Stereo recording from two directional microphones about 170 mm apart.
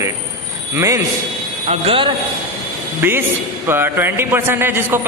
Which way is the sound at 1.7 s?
35° right (ahead or behind).